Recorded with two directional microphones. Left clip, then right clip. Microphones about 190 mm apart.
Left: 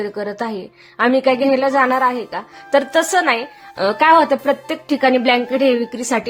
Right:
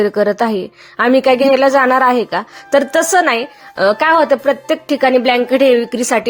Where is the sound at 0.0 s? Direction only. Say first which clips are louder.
Right 10 dB; 35° right (ahead or behind).